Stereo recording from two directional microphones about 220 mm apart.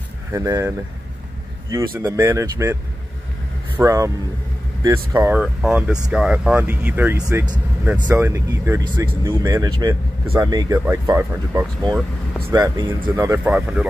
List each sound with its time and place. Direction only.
0.3 s speech: 15° right (ahead or behind)